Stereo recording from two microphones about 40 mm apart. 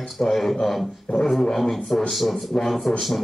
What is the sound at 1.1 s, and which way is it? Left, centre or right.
Speech, left.